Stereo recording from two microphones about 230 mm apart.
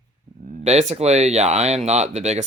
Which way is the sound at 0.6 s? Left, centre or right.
Right.